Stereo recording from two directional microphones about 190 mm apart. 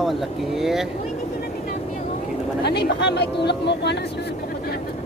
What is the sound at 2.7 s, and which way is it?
Speech, 60° left (ahead or behind).